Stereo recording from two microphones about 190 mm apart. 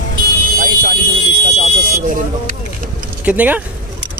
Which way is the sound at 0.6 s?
50° right (ahead or behind).